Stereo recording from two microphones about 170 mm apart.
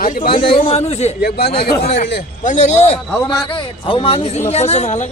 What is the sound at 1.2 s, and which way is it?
Speech, 70° left (ahead or behind).